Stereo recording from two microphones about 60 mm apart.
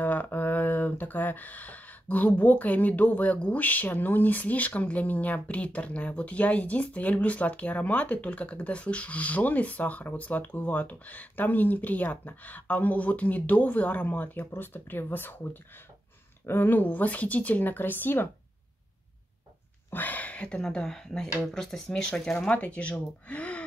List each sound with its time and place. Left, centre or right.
0.0 s speech: left
14.4 s speech: left
19.9 s a sound: left
20.6 s speech: centre